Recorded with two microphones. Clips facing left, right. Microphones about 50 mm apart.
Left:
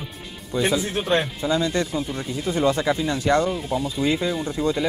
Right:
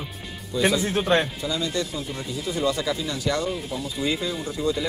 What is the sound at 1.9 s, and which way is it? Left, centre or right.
Speech, left.